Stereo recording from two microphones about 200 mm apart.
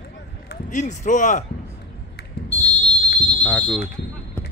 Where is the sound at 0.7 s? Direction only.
40° left (ahead or behind).